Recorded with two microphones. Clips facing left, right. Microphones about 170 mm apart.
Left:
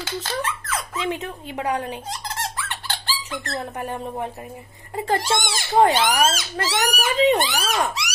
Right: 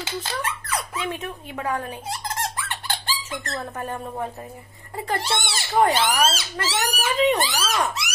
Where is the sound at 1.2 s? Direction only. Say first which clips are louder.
Left 2 dB; 25° left (ahead or behind).